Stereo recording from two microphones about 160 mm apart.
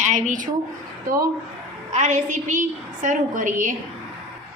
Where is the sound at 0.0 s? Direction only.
50° right (ahead or behind).